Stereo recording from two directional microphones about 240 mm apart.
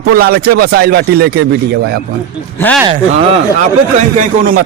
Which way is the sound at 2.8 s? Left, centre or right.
Right.